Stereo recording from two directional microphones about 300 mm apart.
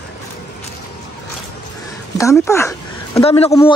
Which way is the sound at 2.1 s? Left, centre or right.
Centre.